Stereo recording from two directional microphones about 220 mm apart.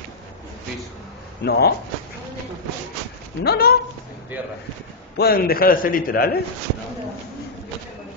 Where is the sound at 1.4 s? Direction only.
45° left (ahead or behind).